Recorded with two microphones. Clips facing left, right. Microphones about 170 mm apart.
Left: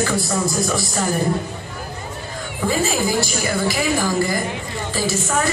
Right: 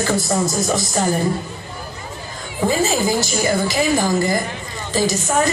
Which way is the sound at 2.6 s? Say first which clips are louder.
Right 2 dB; 20° right (ahead or behind).